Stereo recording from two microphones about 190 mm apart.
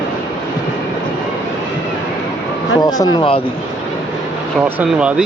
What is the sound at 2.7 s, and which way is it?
Speech, 20° left (ahead or behind).